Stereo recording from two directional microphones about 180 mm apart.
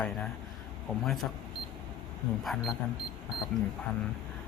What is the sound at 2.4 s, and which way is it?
Speech, centre (ahead or behind).